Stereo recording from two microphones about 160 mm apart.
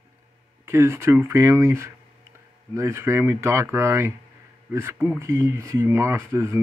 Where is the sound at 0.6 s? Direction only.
15° right (ahead or behind).